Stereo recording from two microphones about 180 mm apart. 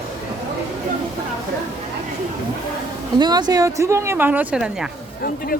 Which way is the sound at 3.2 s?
25° right (ahead or behind).